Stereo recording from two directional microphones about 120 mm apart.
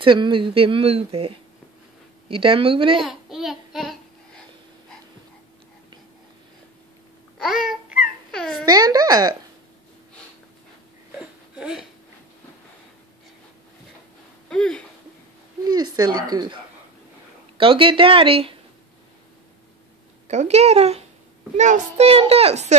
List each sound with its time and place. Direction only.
0.0 s speech: 45° right (ahead or behind)
3.0 s babbling: centre (ahead or behind)
7.3 s babbling: centre (ahead or behind)
8.3 s a sound: 5° left (ahead or behind)
8.6 s speech: 35° right (ahead or behind)
11.1 s a sound: 5° right (ahead or behind)
14.5 s speech: 5° left (ahead or behind)
15.7 s speech: 35° right (ahead or behind)
17.6 s speech: 50° right (ahead or behind)
20.2 s a child's voice: 70° right (ahead or behind)
21.5 s a child's voice: 85° right; by 22.8 s 65° right (ahead or behind)